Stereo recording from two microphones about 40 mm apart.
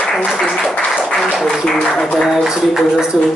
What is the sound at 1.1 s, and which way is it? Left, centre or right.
Applause, centre.